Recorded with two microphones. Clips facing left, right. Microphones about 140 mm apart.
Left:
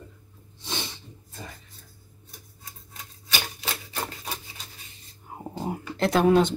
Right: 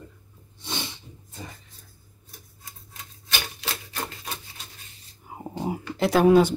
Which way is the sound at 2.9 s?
Centre (ahead or behind).